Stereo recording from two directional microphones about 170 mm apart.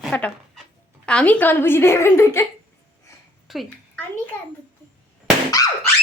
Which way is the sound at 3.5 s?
Centre (ahead or behind).